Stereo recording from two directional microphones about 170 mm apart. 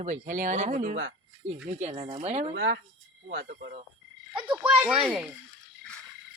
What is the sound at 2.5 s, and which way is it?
Speech, 90° right.